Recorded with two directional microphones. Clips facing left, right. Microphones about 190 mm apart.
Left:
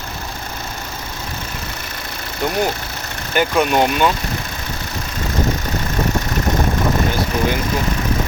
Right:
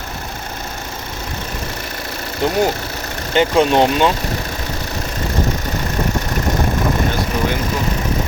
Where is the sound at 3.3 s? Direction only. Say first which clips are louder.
Right 3 dB; 25° right (ahead or behind).